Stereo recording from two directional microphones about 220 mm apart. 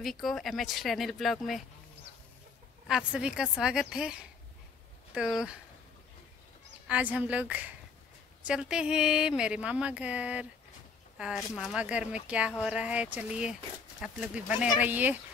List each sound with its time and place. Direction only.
0.0 s speech: centre (ahead or behind)
2.9 s speech: 5° right (ahead or behind)
6.9 s speech: 5° right (ahead or behind)